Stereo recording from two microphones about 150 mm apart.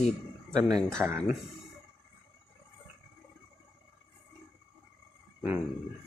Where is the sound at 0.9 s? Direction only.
15° right (ahead or behind).